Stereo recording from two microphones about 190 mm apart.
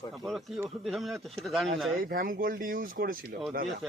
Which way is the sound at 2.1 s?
50° right (ahead or behind).